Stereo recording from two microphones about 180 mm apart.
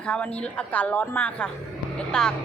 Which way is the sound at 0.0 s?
5° left (ahead or behind).